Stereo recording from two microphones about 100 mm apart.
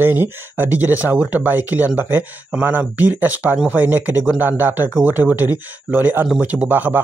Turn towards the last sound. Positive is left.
turn(degrees=-15)  # may be behind; listen again after turning